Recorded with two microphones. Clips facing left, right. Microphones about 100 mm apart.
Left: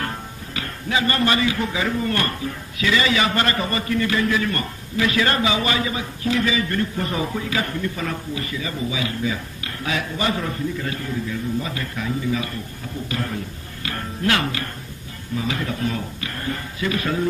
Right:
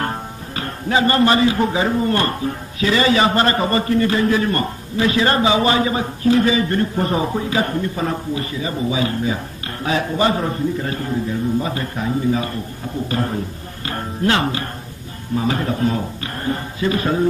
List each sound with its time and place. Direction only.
0.0 s speech: 35° right (ahead or behind)